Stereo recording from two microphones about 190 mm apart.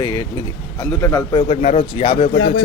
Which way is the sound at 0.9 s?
15° left (ahead or behind).